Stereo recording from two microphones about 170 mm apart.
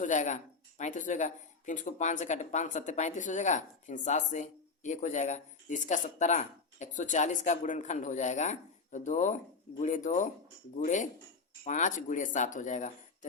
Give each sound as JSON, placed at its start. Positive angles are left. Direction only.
{"t": 0.0, "sound": "speech", "side_deg": 45}